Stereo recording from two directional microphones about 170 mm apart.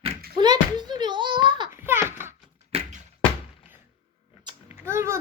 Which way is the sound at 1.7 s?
15° right (ahead or behind).